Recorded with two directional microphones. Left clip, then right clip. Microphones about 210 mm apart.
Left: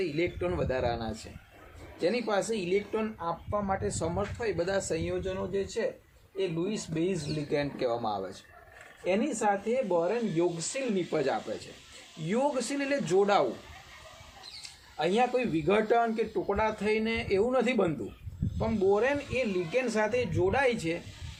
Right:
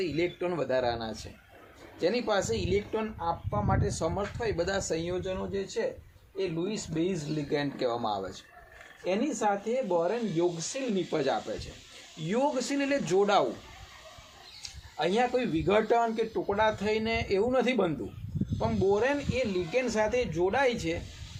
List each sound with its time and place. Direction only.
0.0 s a man's voice: 15° right (ahead or behind)
14.9 s a man's voice: 15° right (ahead or behind)